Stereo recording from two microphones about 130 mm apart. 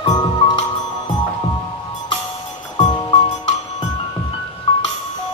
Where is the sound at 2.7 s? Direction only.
40° left (ahead or behind).